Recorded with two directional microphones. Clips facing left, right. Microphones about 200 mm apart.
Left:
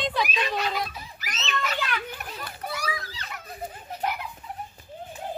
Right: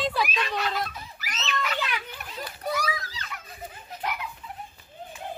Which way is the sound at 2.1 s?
50° left (ahead or behind).